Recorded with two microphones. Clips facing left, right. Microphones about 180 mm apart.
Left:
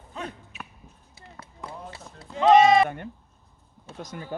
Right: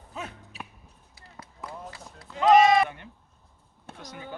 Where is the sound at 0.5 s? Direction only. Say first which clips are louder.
Even; 35° right (ahead or behind).